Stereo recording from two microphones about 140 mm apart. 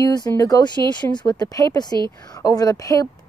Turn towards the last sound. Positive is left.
turn(degrees=25)  # may be behind; listen again after turning